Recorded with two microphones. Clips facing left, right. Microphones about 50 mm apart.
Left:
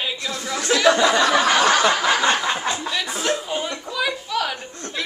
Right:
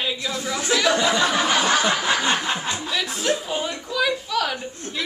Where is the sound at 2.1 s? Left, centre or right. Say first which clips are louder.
Left 3 dB; left.